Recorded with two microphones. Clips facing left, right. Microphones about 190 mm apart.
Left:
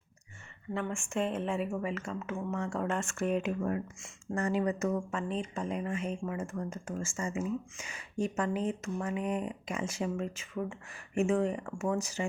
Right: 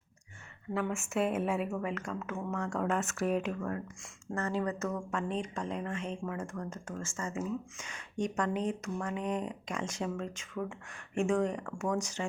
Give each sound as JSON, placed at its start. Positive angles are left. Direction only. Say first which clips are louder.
{"t": 0.7, "sound": "speech", "louder": "right 1 dB", "side_deg": -5}
{"t": 3.6, "sound": "speech", "louder": "left 4 dB", "side_deg": 15}